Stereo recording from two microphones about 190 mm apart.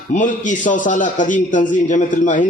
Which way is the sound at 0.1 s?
40° left (ahead or behind).